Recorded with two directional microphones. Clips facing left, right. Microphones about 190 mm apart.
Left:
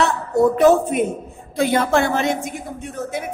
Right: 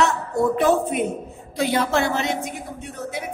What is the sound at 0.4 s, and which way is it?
A woman's voice, 45° left (ahead or behind).